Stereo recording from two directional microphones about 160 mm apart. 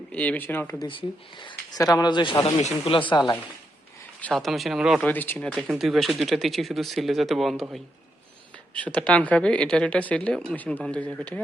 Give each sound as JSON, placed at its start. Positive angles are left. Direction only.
{"t": 0.1, "sound": "speech", "side_deg": 10}
{"t": 0.9, "sound": "speech", "side_deg": 30}
{"t": 2.6, "sound": "speech", "side_deg": 40}
{"t": 4.2, "sound": "speech", "side_deg": 5}
{"t": 5.0, "sound": "speech", "side_deg": 10}
{"t": 8.7, "sound": "speech", "side_deg": 10}